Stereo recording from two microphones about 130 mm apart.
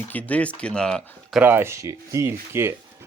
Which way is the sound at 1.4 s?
15° right (ahead or behind).